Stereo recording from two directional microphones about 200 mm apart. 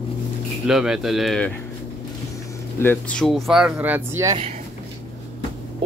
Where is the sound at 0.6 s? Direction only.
5° right (ahead or behind).